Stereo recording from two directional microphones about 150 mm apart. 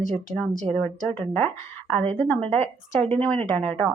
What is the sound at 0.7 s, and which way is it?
Speech, 10° left (ahead or behind).